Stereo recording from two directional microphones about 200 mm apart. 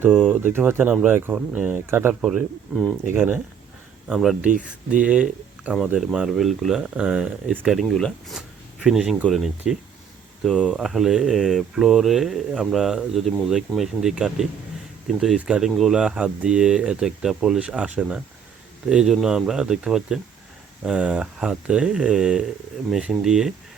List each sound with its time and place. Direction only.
0.1 s speech: 5° left (ahead or behind)
0.3 s speech: 10° right (ahead or behind)
3.2 s speech: 10° right (ahead or behind)
4.4 s speech: 40° right (ahead or behind)
5.0 s speech: 5° right (ahead or behind)